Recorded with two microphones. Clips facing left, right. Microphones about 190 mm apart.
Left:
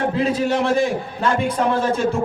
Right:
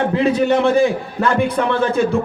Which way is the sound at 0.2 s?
60° right (ahead or behind).